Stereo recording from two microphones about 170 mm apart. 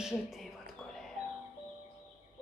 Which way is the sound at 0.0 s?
Centre (ahead or behind).